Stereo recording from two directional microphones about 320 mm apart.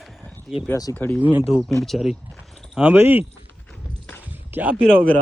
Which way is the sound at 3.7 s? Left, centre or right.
Centre.